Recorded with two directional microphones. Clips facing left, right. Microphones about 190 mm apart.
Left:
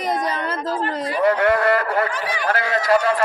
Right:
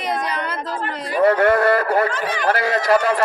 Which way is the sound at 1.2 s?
45° right (ahead or behind).